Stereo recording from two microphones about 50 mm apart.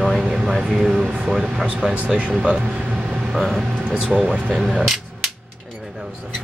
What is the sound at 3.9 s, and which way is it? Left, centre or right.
Speech, right.